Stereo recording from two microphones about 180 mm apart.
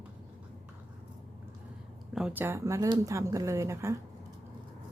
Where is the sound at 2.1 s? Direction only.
5° right (ahead or behind).